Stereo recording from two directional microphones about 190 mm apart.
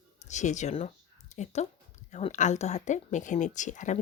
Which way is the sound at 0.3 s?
40° left (ahead or behind).